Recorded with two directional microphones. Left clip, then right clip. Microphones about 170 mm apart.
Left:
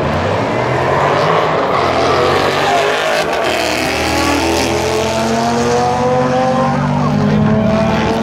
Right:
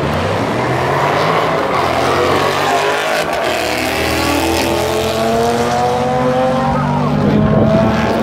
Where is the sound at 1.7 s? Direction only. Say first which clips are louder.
Left 1 dB; 10° right (ahead or behind).